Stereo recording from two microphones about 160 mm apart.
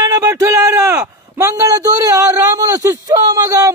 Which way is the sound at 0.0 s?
20° right (ahead or behind).